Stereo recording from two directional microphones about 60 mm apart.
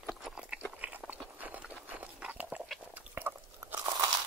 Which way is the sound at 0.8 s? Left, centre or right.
Right.